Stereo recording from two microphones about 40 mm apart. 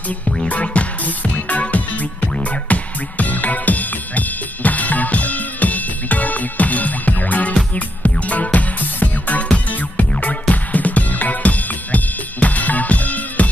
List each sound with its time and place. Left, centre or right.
0.5 s music: left